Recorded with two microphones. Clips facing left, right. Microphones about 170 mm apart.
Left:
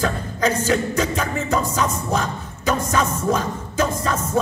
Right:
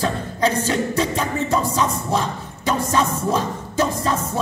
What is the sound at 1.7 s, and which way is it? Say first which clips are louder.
Speech: right 1 dB; 30° right (ahead or behind).